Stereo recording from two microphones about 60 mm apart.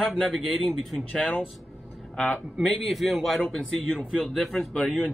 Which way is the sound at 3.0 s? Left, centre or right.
Centre.